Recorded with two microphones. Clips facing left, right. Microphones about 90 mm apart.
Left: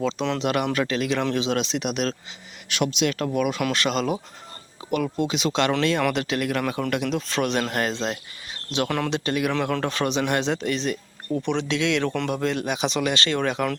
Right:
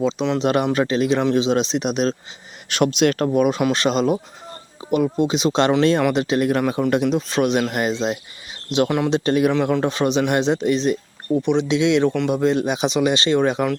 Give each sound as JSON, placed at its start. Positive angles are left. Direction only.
{"t": 0.0, "sound": "speech", "side_deg": -15}
{"t": 0.3, "sound": "speech", "side_deg": -30}
{"t": 2.6, "sound": "speech", "side_deg": -45}
{"t": 3.2, "sound": "speech", "side_deg": -30}